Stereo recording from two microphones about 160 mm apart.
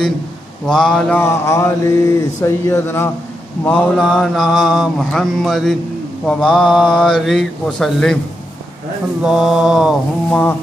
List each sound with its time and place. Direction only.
0.7 s mantra: 5° left (ahead or behind)
1.2 s mantra: 15° left (ahead or behind)
3.6 s mantra: 5° left (ahead or behind)
9.2 s mantra: centre (ahead or behind)